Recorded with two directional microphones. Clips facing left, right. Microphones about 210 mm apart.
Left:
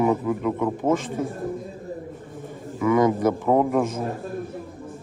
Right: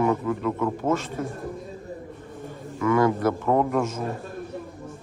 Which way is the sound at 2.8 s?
15° left (ahead or behind).